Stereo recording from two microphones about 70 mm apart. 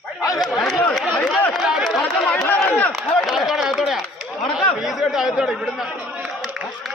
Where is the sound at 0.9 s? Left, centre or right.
Centre.